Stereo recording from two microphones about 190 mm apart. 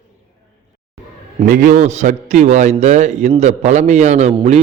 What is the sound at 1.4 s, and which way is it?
A man's voice, 45° right (ahead or behind).